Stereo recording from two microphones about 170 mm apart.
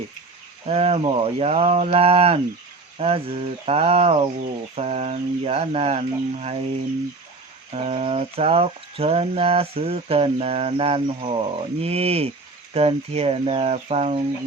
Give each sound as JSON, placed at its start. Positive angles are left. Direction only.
{"t": 0.7, "sound": "speech", "side_deg": -35}
{"t": 7.7, "sound": "speech", "side_deg": -35}